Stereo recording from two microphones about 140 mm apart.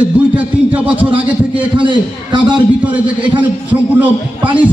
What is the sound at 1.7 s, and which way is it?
Speech, 35° right (ahead or behind).